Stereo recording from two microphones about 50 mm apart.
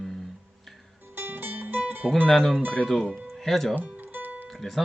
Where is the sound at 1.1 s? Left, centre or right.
Right.